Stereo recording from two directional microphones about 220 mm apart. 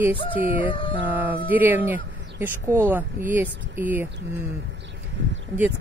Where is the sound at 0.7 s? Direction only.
25° left (ahead or behind).